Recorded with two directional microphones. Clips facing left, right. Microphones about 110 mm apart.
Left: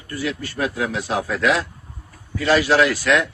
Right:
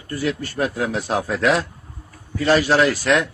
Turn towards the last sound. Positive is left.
turn(degrees=-30)  # may be behind; listen again after turning